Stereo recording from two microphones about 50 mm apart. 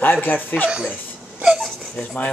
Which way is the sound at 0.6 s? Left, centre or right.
Centre.